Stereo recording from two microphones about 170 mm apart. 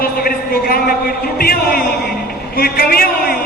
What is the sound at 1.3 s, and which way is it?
Music, 65° left (ahead or behind).